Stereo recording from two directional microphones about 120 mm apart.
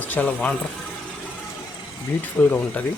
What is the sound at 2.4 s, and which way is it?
Speech, 15° left (ahead or behind).